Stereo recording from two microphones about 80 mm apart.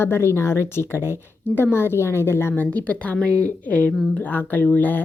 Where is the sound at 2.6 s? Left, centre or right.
Centre.